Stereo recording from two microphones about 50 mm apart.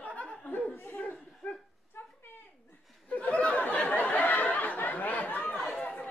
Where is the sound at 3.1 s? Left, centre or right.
Left.